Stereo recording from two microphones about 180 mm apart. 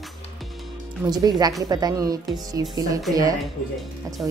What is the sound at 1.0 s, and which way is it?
A woman's voice, 20° right (ahead or behind).